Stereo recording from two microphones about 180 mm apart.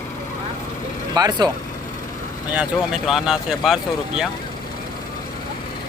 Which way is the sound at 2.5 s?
5° right (ahead or behind).